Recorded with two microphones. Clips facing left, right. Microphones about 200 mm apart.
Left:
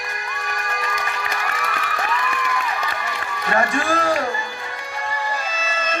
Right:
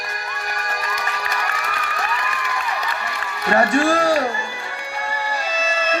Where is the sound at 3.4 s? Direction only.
40° right (ahead or behind).